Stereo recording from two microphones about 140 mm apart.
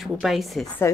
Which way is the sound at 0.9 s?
20° left (ahead or behind).